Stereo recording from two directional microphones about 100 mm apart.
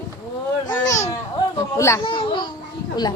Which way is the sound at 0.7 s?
35° left (ahead or behind).